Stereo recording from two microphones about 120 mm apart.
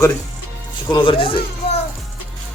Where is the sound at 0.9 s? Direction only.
45° left (ahead or behind).